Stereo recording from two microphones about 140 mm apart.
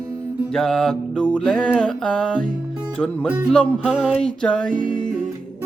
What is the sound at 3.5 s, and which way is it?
Music, 5° left (ahead or behind).